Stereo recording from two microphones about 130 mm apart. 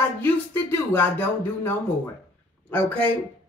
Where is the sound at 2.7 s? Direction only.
10° left (ahead or behind).